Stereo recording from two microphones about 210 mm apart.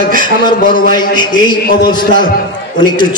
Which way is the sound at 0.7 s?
20° left (ahead or behind).